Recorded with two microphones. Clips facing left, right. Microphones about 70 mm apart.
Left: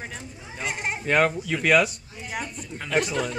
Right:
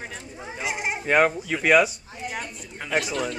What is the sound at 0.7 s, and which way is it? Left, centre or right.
Speech, centre.